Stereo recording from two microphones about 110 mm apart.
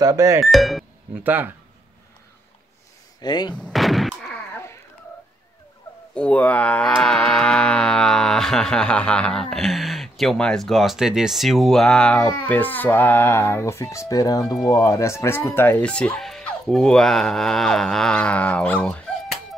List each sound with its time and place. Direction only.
0.0 s speech: 30° right (ahead or behind)
0.4 s speech: centre (ahead or behind)
1.2 s speech: 15° right (ahead or behind)
3.2 s speech: 40° left (ahead or behind)
3.5 s artillery fire: 5° left (ahead or behind)
6.1 s music: 10° left (ahead or behind)
12.3 s speech: 20° left (ahead or behind)